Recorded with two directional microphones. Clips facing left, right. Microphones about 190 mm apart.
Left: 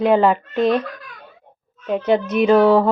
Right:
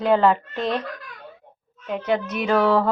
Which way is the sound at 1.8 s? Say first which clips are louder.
Left 5 dB; 25° left (ahead or behind).